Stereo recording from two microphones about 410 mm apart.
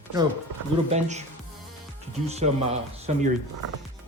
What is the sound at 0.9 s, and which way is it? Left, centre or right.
Speech, centre.